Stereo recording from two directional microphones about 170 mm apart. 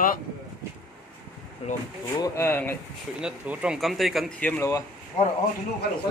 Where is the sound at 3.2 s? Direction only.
5° right (ahead or behind); by 4.7 s 10° left (ahead or behind).